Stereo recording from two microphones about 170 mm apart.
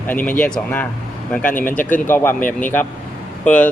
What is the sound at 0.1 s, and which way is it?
Speech, 10° left (ahead or behind).